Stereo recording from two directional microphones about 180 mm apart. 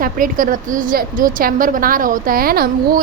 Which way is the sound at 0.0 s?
50° right (ahead or behind).